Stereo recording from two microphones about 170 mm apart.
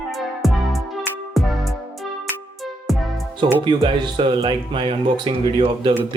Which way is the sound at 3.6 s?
30° right (ahead or behind).